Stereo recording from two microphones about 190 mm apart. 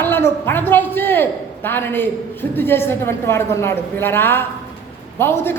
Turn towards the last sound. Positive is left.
turn(degrees=10)  # may be behind; listen again after turning